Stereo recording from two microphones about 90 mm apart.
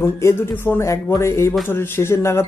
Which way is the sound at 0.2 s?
30° left (ahead or behind).